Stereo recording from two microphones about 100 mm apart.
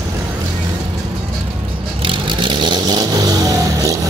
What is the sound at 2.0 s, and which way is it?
Vehicle, 55° right (ahead or behind).